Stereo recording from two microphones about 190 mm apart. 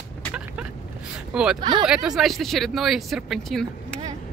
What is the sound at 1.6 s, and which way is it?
Speech, 25° right (ahead or behind).